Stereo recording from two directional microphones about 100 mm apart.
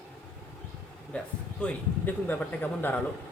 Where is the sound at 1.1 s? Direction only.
10° left (ahead or behind).